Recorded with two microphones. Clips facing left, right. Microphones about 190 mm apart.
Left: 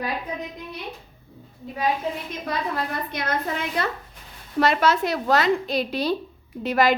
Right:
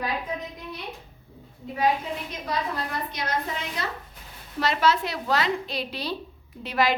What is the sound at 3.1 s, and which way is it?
A woman's voice, 55° left (ahead or behind).